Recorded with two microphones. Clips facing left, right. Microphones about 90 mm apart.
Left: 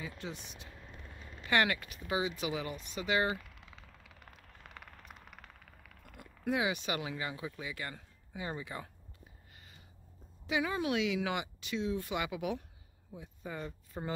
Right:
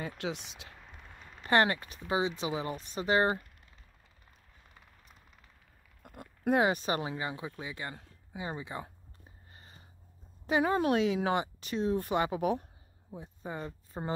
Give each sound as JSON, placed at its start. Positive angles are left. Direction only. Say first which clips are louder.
{"t": 0.0, "sound": "speech", "louder": "right 6 dB", "side_deg": -85}
{"t": 1.4, "sound": "speech", "louder": "right 4 dB", "side_deg": -35}
{"t": 3.5, "sound": "vehicle", "louder": "left 6 dB", "side_deg": 90}
{"t": 6.0, "sound": "speech", "louder": "right 5 dB", "side_deg": -50}
{"t": 10.4, "sound": "speech", "louder": "right 6 dB", "side_deg": -45}